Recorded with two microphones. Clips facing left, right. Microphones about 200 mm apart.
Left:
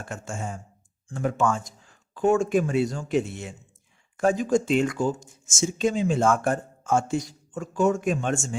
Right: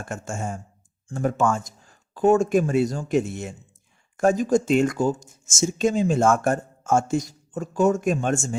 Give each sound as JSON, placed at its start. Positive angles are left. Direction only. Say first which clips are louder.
{"t": 0.0, "sound": "speech", "louder": "right 3 dB", "side_deg": -45}